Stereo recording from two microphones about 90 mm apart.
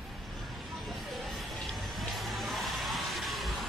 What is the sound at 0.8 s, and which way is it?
Vehicle, centre (ahead or behind).